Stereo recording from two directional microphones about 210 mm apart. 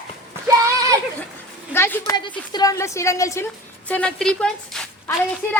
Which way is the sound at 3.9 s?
5° left (ahead or behind).